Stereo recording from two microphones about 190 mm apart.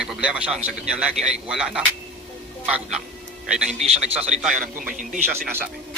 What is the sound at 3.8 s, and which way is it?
A man's voice, 35° right (ahead or behind).